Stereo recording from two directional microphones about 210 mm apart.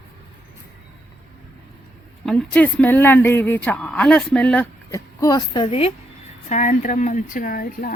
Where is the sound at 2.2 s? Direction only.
5° left (ahead or behind).